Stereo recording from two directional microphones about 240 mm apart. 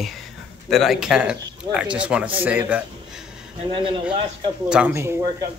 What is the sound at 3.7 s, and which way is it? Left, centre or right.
Speech, right.